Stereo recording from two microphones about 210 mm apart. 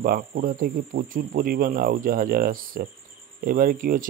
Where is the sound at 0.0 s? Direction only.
45° right (ahead or behind).